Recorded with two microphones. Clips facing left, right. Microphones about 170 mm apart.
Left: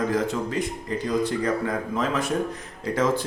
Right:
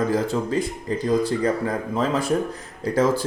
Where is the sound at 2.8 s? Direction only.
35° right (ahead or behind).